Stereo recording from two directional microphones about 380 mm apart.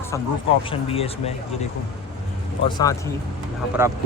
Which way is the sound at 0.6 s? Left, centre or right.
Centre.